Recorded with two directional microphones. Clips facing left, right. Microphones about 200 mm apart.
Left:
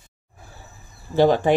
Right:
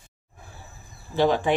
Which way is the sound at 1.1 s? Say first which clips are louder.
Left 5 dB; 45° left (ahead or behind).